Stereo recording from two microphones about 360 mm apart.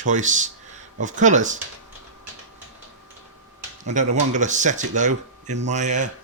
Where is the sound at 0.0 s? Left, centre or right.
Right.